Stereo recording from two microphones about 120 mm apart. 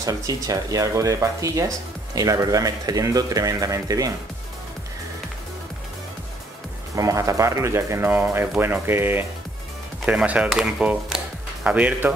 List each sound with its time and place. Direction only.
0.0 s speech: 30° right (ahead or behind)
7.0 s speech: 25° right (ahead or behind); by 12.1 s 10° right (ahead or behind)